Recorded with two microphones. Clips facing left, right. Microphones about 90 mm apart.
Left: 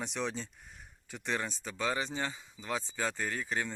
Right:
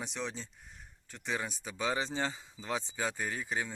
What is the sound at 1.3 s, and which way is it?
Speech, 10° right (ahead or behind).